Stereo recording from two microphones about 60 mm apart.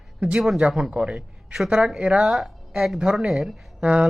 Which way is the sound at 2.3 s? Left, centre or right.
Centre.